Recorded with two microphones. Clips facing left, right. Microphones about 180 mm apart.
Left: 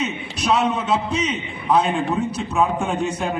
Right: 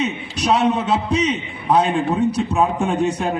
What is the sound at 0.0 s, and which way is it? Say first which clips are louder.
A man's voice: right 3 dB; 35° right (ahead or behind).